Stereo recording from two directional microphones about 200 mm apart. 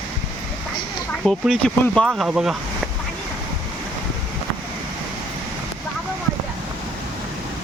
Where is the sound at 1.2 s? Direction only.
5° left (ahead or behind).